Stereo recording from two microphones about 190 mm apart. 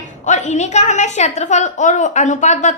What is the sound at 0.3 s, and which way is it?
A woman's voice, 40° left (ahead or behind).